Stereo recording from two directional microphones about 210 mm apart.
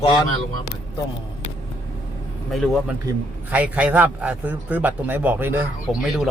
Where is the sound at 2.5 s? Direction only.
Centre (ahead or behind).